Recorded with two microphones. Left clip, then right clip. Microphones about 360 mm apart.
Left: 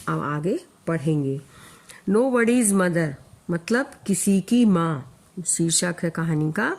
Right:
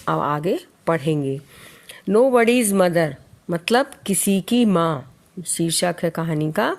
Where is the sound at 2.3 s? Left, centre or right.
Centre.